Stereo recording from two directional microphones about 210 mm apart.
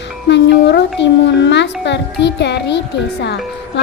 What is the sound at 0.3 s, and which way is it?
Speech, 55° left (ahead or behind).